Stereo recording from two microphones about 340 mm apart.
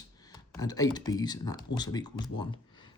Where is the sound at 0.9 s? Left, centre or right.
Centre.